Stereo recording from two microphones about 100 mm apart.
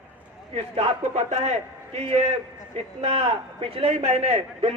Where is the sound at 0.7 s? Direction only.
90° right.